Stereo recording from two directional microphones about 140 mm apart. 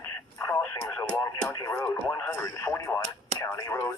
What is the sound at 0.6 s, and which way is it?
Speech, 15° left (ahead or behind).